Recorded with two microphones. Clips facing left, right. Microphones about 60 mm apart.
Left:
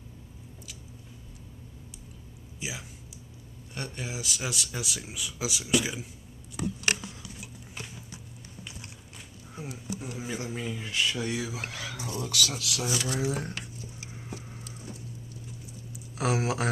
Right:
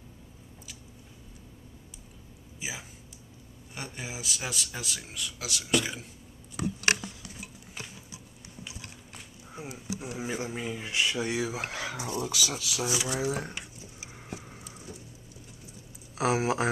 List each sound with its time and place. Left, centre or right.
2.6 s speech: centre
9.5 s speech: centre
12.2 s speech: centre
14.1 s a sound: centre
16.2 s speech: centre